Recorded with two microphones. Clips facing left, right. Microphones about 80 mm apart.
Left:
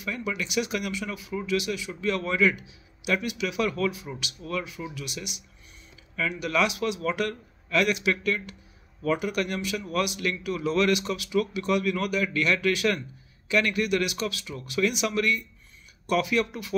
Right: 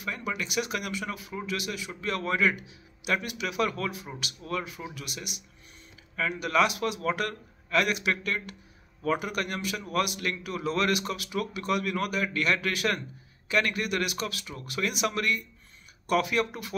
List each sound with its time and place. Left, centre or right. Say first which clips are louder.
0.0 s a man's voice: left 2 dB; right